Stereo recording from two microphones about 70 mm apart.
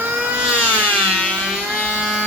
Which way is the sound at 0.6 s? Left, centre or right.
Left.